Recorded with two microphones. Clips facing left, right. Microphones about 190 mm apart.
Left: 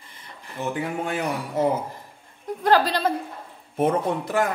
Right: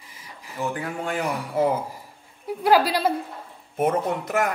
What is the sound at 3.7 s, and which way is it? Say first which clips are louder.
Speech: left 1 dB; 30° left (ahead or behind).